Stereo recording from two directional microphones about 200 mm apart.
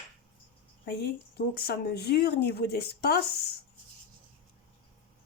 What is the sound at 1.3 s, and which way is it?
Speech, 50° left (ahead or behind).